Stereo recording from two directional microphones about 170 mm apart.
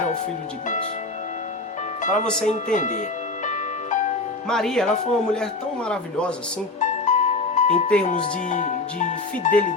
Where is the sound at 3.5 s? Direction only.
45° left (ahead or behind).